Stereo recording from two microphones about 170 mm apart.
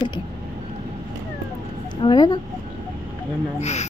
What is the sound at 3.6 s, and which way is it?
Speech, 40° left (ahead or behind).